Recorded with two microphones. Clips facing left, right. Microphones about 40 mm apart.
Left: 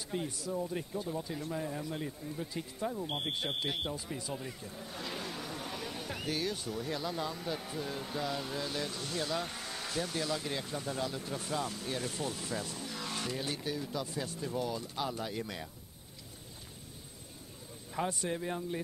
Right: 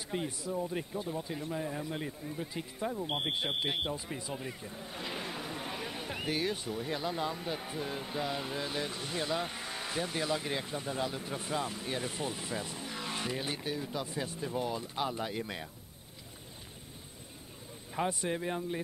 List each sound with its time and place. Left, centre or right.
0.1 s speech: right
17.9 s speech: centre